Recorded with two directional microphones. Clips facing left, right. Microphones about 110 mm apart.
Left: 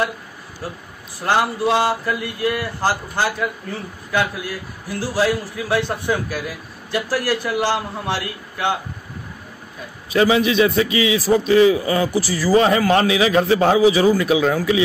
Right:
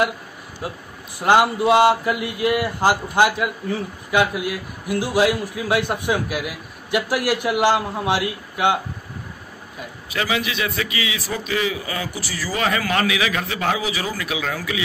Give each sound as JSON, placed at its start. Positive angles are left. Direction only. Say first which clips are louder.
{"t": 1.2, "sound": "a man's voice", "louder": "right 3 dB", "side_deg": -15}
{"t": 10.1, "sound": "a man's voice", "louder": "left 9 dB", "side_deg": 30}